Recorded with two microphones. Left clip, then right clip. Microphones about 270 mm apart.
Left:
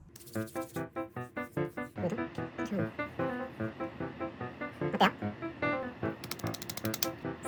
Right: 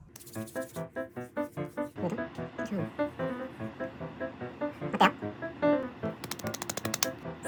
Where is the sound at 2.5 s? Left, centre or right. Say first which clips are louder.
Right 1 dB; centre.